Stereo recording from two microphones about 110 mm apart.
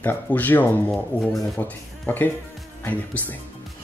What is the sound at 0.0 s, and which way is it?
Speech, 15° left (ahead or behind).